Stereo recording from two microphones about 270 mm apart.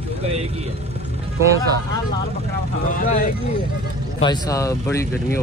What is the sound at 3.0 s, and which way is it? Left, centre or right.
Speech, left.